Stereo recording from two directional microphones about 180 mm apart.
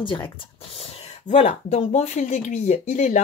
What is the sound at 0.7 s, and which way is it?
Speech, 35° left (ahead or behind).